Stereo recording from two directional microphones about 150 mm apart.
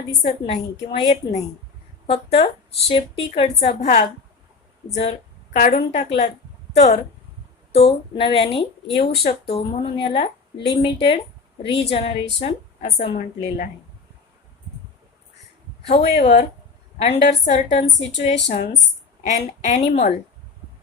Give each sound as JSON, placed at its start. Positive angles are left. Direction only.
{"t": 0.4, "sound": "a woman's voice", "side_deg": 40}
{"t": 5.7, "sound": "a woman's voice", "side_deg": 45}
{"t": 12.8, "sound": "a woman's voice", "side_deg": 60}
{"t": 15.9, "sound": "a woman's voice", "side_deg": 45}